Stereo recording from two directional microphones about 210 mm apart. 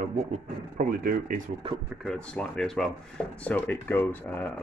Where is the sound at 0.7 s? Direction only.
40° right (ahead or behind).